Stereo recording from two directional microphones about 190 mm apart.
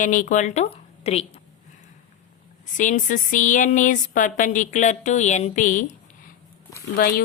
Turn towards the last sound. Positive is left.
turn(degrees=45)  # may be behind; listen again after turning